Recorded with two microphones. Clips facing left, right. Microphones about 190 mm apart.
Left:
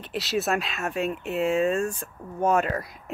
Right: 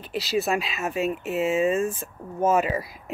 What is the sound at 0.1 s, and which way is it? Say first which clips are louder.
Speech: right 1 dB; centre (ahead or behind).